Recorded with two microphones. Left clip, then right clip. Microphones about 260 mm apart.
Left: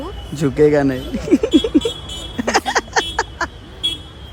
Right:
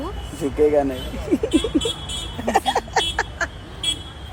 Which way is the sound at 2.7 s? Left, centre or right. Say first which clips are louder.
Left 3 dB; left.